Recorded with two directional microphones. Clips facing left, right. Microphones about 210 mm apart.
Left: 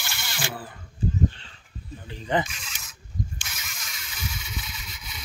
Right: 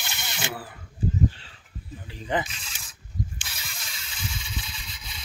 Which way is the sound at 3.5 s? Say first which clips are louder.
Even; 30° right (ahead or behind).